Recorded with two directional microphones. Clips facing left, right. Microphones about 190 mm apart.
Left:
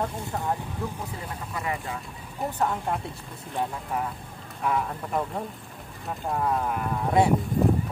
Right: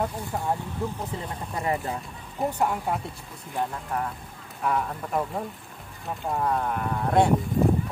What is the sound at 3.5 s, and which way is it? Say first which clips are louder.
Speech: even; 5° left (ahead or behind).